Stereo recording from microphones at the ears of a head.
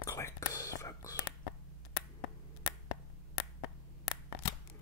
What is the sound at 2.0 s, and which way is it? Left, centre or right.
Finger snapping, left.